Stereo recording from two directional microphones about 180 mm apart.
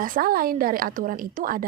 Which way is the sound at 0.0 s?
50° right (ahead or behind).